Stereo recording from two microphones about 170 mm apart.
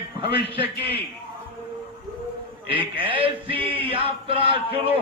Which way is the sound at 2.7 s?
30° right (ahead or behind).